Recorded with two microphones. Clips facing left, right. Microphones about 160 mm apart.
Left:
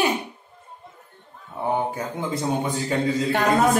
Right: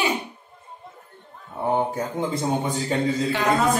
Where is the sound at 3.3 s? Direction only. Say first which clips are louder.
Left 4 dB; 55° left (ahead or behind).